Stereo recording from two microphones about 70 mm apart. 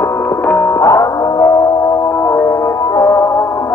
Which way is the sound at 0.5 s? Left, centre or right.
Left.